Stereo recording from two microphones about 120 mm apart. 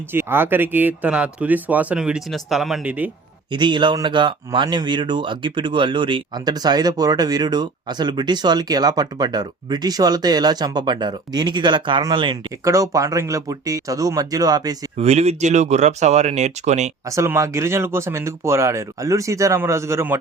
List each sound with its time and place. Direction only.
0.1 s speech: 20° right (ahead or behind); by 2.9 s centre (ahead or behind)
3.5 s speech: 40° right (ahead or behind)
12.6 s speech: 25° right (ahead or behind)
14.9 s speech: 65° right (ahead or behind)
17.1 s speech: 25° right (ahead or behind)